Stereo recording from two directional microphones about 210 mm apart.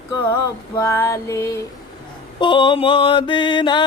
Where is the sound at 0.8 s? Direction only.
10° left (ahead or behind).